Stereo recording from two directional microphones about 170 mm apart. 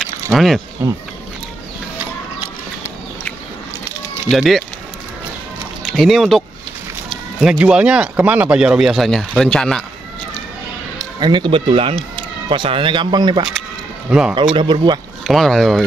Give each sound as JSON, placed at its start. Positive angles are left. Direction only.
{"t": 0.0, "sound": "a sound", "side_deg": 0}
{"t": 0.8, "sound": "speech", "side_deg": -15}
{"t": 4.3, "sound": "speech", "side_deg": 0}
{"t": 5.8, "sound": "speech", "side_deg": 0}
{"t": 11.0, "sound": "speech", "side_deg": -25}
{"t": 15.2, "sound": "speech", "side_deg": 0}